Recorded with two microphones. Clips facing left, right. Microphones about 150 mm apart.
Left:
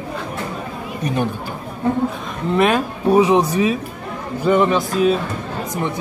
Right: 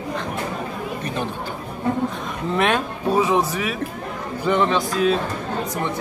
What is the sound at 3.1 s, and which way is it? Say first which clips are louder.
A man's voice: left 5 dB; 15° left (ahead or behind).